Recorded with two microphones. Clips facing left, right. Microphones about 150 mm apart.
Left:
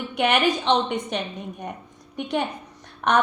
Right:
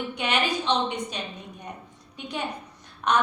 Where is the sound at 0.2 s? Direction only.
55° left (ahead or behind).